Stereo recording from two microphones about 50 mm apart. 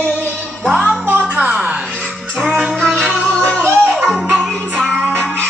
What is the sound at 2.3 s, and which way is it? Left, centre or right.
Music, centre.